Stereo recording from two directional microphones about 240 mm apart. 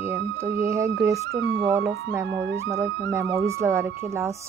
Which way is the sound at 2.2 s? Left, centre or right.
Right.